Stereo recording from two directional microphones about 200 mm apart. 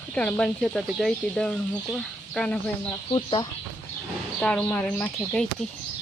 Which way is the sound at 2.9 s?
20° left (ahead or behind).